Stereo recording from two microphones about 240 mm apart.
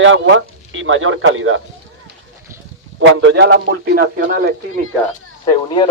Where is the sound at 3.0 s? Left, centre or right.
Right.